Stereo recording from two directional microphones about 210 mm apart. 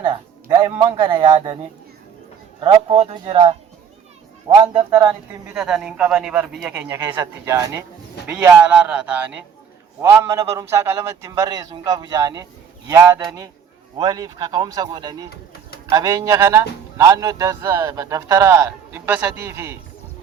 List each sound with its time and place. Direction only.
0.0 s a man's voice: 20° right (ahead or behind)
2.6 s speech: 25° right (ahead or behind)
5.5 s speech: 5° right (ahead or behind)